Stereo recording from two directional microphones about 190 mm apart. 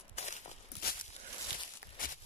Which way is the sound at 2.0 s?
45° left (ahead or behind).